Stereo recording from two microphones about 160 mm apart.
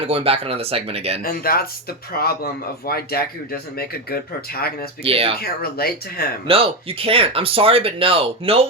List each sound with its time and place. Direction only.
0.1 s speech: 35° right (ahead or behind)
1.2 s speech: 70° left (ahead or behind)
5.0 s speech: 35° right (ahead or behind)
5.4 s speech: 70° left (ahead or behind)
6.5 s speech: 35° right (ahead or behind)